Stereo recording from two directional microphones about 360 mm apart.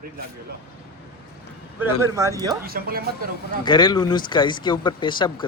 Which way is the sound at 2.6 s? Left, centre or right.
Right.